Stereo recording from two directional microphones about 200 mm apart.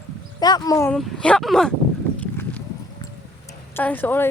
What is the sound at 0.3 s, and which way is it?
Speech, 20° left (ahead or behind).